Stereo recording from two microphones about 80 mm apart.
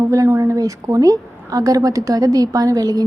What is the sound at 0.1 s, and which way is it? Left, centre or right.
A woman's voice, right.